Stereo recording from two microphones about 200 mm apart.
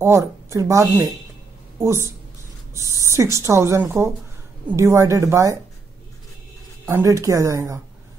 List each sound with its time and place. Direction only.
0.0 s a woman's voice: 15° right (ahead or behind)
6.9 s a woman's voice: 15° right (ahead or behind)